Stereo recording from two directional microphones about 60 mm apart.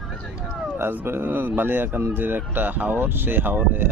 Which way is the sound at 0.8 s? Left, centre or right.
Right.